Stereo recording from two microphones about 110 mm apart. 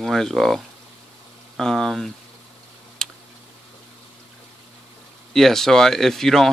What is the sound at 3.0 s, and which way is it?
Tick, 5° left (ahead or behind).